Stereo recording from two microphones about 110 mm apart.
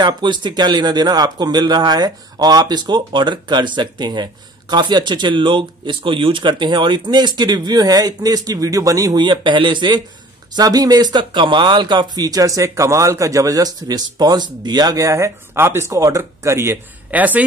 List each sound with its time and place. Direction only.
0.0 s speech: 45° right (ahead or behind); by 17.5 s 15° right (ahead or behind)